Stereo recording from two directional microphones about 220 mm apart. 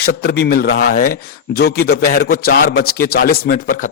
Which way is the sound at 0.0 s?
45° left (ahead or behind).